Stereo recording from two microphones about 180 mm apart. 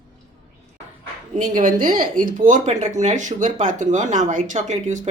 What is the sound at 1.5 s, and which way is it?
Speech, 50° right (ahead or behind).